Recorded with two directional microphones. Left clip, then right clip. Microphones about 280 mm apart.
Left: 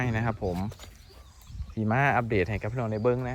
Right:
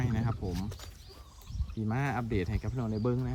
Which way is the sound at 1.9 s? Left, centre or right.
Centre.